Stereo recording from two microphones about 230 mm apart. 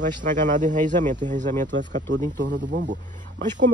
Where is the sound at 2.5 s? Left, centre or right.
Right.